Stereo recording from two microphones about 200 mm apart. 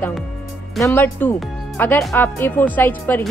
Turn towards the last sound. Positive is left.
turn(degrees=10)  # may be behind; listen again after turning